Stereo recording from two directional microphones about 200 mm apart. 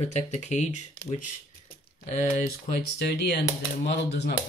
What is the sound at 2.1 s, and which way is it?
Speech, 40° left (ahead or behind).